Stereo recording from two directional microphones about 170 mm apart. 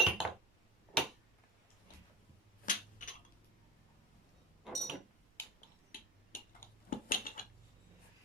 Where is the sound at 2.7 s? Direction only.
50° left (ahead or behind).